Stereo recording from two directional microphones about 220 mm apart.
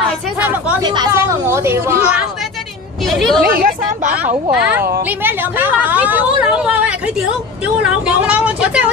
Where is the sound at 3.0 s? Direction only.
Centre (ahead or behind).